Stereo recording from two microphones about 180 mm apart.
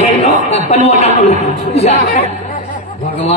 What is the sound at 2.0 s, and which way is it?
Speech, 65° left (ahead or behind).